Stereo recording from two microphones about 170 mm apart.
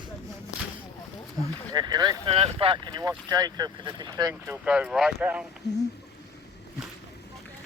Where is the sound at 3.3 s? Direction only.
20° right (ahead or behind).